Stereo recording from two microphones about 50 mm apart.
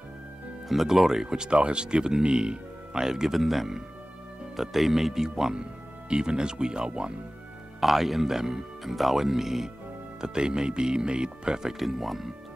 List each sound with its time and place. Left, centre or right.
0.7 s speech: centre
7.8 s speech: centre
11.8 s speech: centre